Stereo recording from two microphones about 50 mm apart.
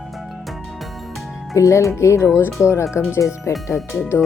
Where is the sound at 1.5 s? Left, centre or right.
Left.